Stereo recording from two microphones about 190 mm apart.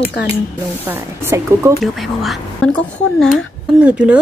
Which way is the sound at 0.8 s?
10° right (ahead or behind).